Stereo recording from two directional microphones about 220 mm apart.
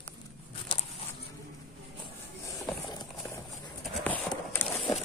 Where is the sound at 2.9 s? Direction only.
15° left (ahead or behind).